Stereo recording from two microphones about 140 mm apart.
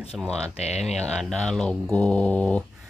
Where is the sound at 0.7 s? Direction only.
Centre (ahead or behind).